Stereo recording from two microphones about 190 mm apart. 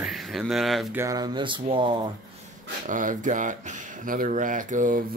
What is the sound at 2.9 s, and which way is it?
Speech, 45° right (ahead or behind).